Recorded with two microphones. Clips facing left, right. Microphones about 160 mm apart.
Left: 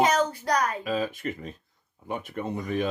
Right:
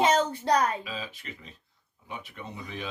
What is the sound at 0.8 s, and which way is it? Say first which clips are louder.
Speech: left 11 dB; 50° left (ahead or behind).